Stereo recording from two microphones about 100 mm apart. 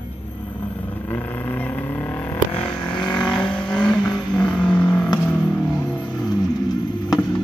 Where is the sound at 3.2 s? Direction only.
5° left (ahead or behind).